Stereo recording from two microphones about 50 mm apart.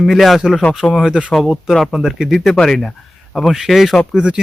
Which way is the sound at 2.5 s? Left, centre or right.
Centre.